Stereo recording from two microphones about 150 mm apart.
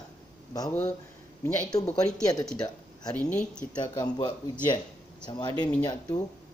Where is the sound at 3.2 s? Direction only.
55° left (ahead or behind).